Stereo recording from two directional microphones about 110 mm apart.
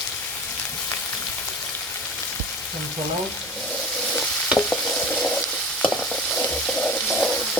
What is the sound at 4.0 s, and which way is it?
Stir, 10° left (ahead or behind).